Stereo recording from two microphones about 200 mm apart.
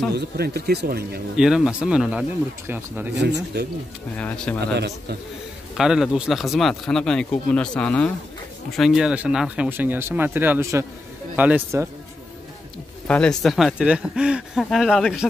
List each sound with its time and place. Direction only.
0.1 s speech: 55° right (ahead or behind)
1.3 s speech: 5° right (ahead or behind)
3.2 s speech: 60° right (ahead or behind)
4.7 s speech: 55° right (ahead or behind)
5.8 s speech: 5° right (ahead or behind)
13.0 s speech: 5° left (ahead or behind)